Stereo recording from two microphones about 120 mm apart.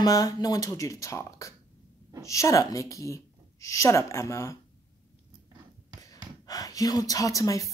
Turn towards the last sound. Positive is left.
turn(degrees=25)  # may be behind; listen again after turning